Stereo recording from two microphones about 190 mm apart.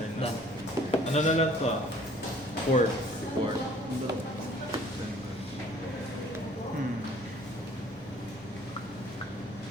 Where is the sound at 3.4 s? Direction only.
25° right (ahead or behind).